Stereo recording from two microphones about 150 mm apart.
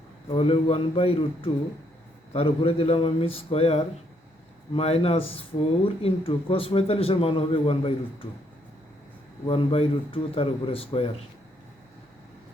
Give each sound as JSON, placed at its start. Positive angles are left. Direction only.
{"t": 0.3, "sound": "speech", "side_deg": 40}
{"t": 9.5, "sound": "speech", "side_deg": 35}